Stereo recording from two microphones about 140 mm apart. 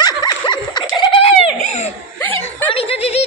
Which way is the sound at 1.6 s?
50° left (ahead or behind).